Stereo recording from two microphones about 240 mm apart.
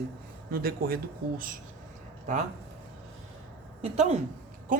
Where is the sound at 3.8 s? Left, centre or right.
Right.